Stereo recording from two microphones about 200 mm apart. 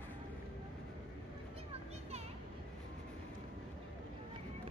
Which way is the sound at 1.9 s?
30° right (ahead or behind).